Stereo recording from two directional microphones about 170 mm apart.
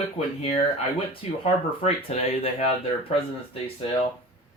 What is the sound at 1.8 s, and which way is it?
Speech, 35° left (ahead or behind).